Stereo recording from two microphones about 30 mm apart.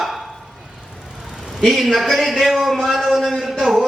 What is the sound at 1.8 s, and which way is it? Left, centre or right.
A man's voice, centre.